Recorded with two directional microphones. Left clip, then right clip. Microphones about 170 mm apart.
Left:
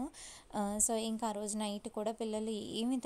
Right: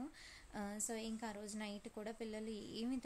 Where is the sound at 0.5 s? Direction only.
45° left (ahead or behind).